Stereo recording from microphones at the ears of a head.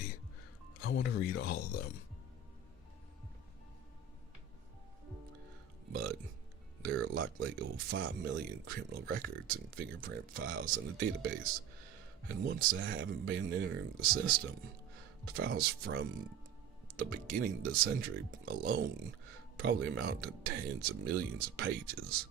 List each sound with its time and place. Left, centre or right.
0.8 s speech: left
5.9 s burping: right
6.8 s speech: right